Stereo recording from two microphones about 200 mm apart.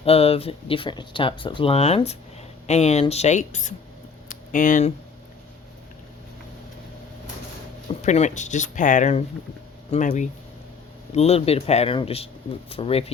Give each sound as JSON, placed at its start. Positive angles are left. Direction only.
{"t": 0.0, "sound": "speech", "side_deg": 30}
{"t": 4.3, "sound": "a sound", "side_deg": 40}
{"t": 8.0, "sound": "speech", "side_deg": 35}